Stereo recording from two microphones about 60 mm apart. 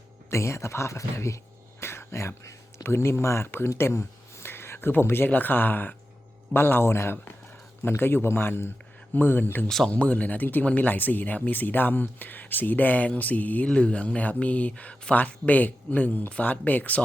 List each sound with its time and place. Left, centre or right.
0.3 s speech: left
1.8 s a sound: left
2.8 s speech: left
3.8 s a sound: left
4.9 s a man's voice: left
9.6 s speech: centre
9.9 s speech: left